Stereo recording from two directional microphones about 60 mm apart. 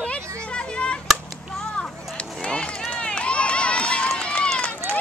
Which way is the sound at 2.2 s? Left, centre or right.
Centre.